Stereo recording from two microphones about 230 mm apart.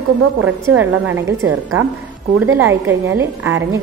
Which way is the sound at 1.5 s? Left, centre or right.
Right.